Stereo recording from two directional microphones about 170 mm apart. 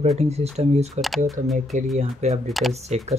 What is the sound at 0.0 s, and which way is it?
Speech, 40° right (ahead or behind).